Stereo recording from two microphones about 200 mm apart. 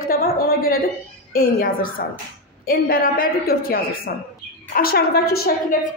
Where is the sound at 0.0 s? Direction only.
45° left (ahead or behind).